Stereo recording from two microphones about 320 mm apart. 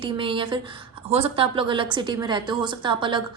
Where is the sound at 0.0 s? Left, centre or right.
Centre.